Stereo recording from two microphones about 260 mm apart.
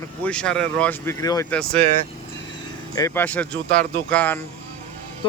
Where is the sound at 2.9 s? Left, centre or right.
Centre.